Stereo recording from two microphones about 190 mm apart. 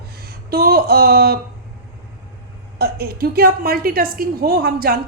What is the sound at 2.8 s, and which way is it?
A woman's voice, 55° right (ahead or behind).